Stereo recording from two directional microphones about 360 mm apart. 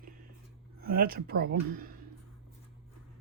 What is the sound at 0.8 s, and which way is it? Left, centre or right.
Speech, right.